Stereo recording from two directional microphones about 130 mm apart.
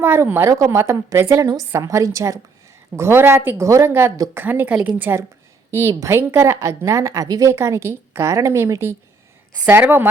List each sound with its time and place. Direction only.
0.0 s a woman's voice: 20° right (ahead or behind)